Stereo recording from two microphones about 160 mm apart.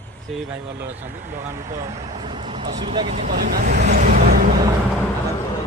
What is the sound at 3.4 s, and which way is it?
Speech, 70° right (ahead or behind).